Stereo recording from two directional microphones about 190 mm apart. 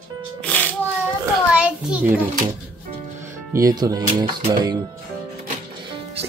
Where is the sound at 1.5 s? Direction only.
5° right (ahead or behind).